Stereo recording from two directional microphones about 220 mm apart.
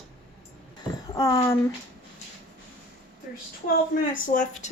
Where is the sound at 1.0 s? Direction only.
15° left (ahead or behind).